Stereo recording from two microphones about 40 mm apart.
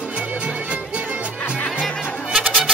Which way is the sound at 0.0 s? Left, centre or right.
Right.